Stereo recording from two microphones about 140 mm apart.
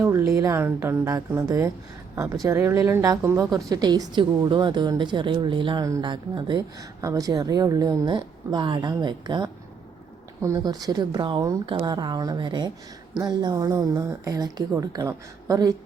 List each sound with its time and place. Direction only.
0.0 s speech: 20° right (ahead or behind)
3.4 s a woman's voice: centre (ahead or behind)
3.7 s a woman's voice: 30° right (ahead or behind)